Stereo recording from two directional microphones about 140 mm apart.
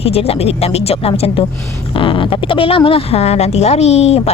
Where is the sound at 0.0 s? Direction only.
45° left (ahead or behind).